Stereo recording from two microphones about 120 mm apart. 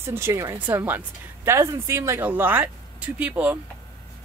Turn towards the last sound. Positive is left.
turn(degrees=-15)  # may be behind; listen again after turning